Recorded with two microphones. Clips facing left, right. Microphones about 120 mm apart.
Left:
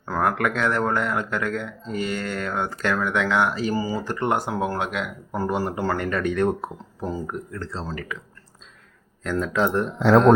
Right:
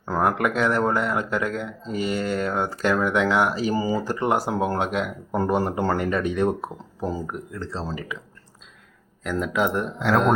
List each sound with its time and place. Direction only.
0.0 s speech: 15° right (ahead or behind)
4.1 s speech: 10° right (ahead or behind)
4.4 s speech: 20° right (ahead or behind)
9.2 s speech: 10° right (ahead or behind)